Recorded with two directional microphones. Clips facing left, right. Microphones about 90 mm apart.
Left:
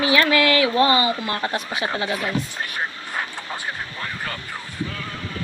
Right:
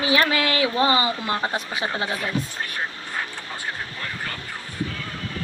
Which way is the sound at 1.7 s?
35° right (ahead or behind).